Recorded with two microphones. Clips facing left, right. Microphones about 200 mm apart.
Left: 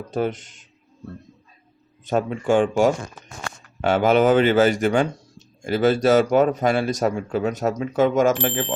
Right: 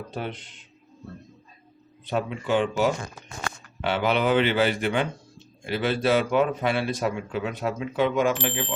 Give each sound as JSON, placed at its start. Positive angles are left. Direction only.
{"t": 0.1, "sound": "a man's voice", "side_deg": 45}
{"t": 2.0, "sound": "a man's voice", "side_deg": 45}